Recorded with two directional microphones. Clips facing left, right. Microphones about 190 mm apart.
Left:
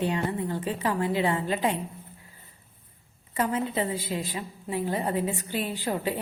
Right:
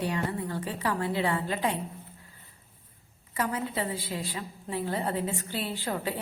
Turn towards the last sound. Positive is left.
turn(degrees=15)  # may be behind; listen again after turning